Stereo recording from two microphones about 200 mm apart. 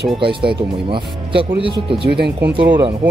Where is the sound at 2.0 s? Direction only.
55° right (ahead or behind).